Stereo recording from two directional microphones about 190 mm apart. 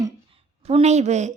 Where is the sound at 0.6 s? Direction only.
35° right (ahead or behind).